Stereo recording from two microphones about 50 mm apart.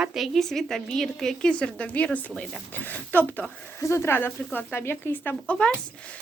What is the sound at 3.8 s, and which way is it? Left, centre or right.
Speech, left.